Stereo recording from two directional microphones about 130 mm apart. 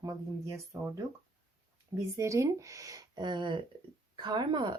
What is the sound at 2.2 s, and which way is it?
A woman's voice, 25° right (ahead or behind).